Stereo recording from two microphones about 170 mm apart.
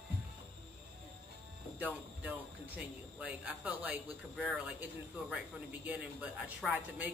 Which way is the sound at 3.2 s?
5° right (ahead or behind).